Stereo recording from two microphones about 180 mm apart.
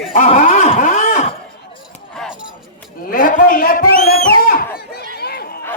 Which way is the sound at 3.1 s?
50° left (ahead or behind).